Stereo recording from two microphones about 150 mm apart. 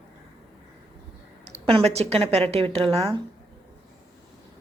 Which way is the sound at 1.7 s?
40° right (ahead or behind).